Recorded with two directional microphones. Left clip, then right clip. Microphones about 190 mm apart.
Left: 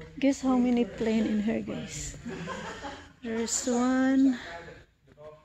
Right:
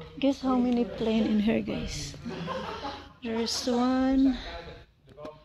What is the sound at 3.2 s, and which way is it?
Speech, 5° left (ahead or behind).